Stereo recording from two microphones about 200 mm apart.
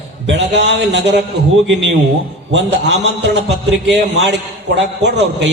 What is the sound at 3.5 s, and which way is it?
A man's voice, 60° right (ahead or behind).